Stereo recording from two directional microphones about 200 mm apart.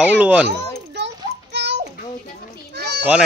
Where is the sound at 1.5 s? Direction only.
60° right (ahead or behind).